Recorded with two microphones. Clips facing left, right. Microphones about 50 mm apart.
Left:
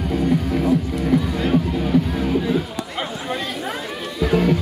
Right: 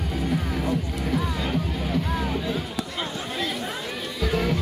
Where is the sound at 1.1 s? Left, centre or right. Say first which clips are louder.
Left 8 dB; centre.